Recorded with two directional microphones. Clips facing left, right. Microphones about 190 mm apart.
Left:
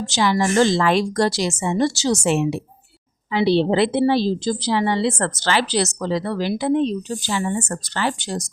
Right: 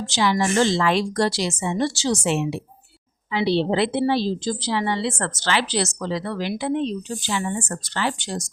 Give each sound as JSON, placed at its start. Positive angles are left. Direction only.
{"t": 0.0, "sound": "a woman's voice", "side_deg": 45}